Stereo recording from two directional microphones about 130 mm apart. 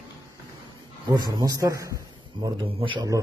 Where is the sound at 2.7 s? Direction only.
45° right (ahead or behind).